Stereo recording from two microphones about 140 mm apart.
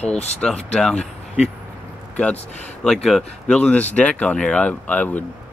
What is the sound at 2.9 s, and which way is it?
Speech, 5° left (ahead or behind).